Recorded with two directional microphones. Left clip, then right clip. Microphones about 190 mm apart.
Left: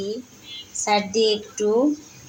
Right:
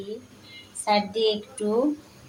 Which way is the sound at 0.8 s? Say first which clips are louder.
Left 3 dB; 35° left (ahead or behind).